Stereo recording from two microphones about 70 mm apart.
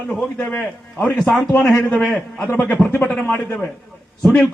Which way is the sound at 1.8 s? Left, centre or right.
Centre.